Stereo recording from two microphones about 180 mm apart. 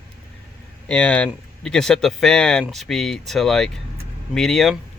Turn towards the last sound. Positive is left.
turn(degrees=0)  # may be behind; listen again after turning